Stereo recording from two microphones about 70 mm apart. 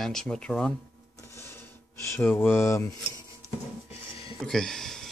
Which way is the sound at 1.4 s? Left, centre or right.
Left.